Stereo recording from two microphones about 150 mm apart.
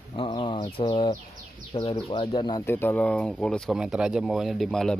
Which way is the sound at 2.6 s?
15° left (ahead or behind).